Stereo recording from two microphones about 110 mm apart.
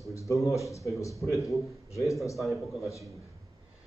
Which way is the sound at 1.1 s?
Centre (ahead or behind).